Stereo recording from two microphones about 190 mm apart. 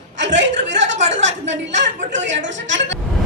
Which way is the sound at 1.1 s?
70° right (ahead or behind).